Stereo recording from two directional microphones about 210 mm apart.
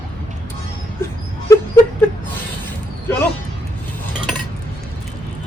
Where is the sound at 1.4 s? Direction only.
15° left (ahead or behind).